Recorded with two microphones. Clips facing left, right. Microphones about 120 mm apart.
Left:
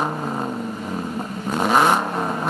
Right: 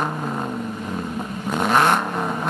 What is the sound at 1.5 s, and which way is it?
Vehicle, 5° left (ahead or behind).